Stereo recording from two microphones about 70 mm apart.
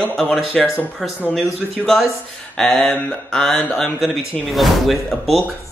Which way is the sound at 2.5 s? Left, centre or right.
Centre.